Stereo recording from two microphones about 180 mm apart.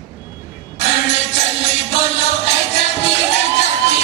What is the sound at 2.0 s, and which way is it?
Music, 40° left (ahead or behind).